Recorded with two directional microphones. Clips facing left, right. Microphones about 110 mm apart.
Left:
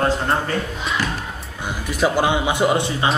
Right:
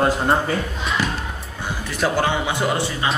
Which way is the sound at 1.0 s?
15° right (ahead or behind).